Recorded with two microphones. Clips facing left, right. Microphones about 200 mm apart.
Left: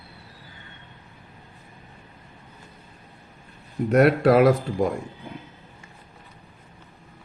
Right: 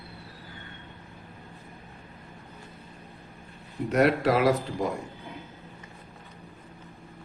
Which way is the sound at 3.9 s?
55° left (ahead or behind).